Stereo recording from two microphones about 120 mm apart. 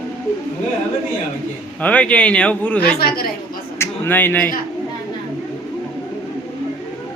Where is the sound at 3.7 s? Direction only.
20° left (ahead or behind).